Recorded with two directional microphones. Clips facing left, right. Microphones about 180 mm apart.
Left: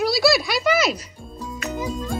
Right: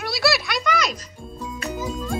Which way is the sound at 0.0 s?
Centre (ahead or behind).